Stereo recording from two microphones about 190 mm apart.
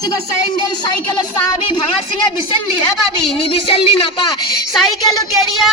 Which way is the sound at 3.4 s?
30° left (ahead or behind).